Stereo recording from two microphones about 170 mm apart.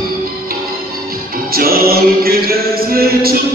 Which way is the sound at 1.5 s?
60° right (ahead or behind).